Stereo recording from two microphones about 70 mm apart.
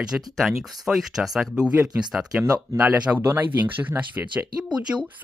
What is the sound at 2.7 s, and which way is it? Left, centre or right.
Speech, centre.